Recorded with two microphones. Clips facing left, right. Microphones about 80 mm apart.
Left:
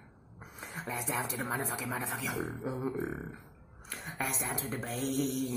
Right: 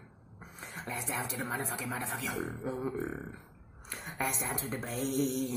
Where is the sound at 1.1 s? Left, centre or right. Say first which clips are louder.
Left 1 dB; centre.